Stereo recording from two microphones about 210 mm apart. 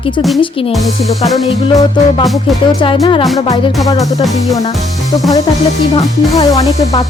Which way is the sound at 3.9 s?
15° left (ahead or behind).